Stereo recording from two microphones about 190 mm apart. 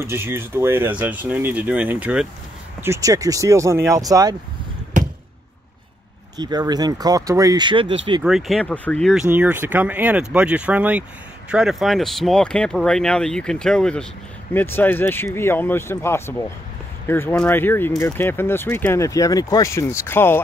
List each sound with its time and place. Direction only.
0.0 s speech: 10° right (ahead or behind)
6.3 s speech: 20° right (ahead or behind)
8.2 s speech: centre (ahead or behind)
9.3 s speech: 10° right (ahead or behind); by 20.3 s 10° left (ahead or behind)